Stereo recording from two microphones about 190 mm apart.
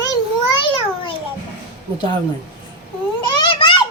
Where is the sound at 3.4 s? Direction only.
25° left (ahead or behind).